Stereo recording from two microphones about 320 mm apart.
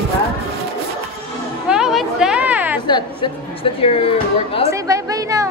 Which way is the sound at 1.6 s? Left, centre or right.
Centre.